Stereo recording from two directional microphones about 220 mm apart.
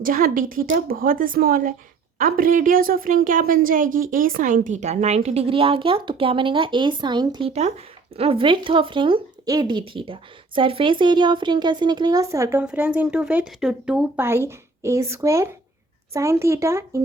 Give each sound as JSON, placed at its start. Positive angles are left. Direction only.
{"t": 0.0, "sound": "a woman's voice", "side_deg": -40}